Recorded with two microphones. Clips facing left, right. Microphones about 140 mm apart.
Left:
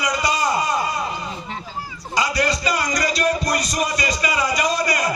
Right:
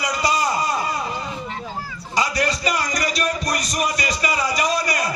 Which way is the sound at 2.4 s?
30° left (ahead or behind).